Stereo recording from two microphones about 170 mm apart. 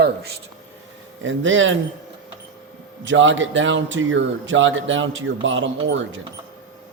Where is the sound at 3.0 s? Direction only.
90° right.